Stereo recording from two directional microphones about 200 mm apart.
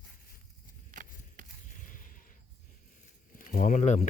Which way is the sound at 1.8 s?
40° left (ahead or behind).